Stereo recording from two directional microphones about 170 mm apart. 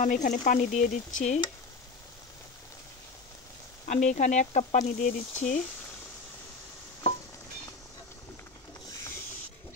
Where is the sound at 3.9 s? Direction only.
45° left (ahead or behind).